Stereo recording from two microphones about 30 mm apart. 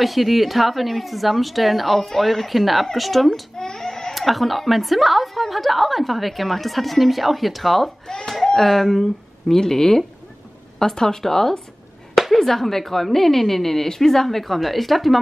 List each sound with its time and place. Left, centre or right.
0.0 s a woman's voice: centre
3.5 s baby cry: centre
4.1 s a woman's voice: centre
8.1 s a child's voice: left
8.5 s speech: centre